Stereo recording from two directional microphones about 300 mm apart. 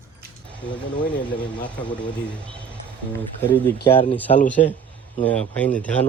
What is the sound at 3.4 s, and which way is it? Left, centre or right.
A man's voice, centre.